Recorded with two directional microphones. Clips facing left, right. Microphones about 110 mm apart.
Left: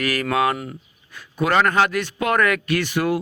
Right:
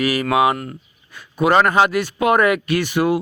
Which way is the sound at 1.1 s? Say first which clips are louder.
Right 4 dB; 15° right (ahead or behind).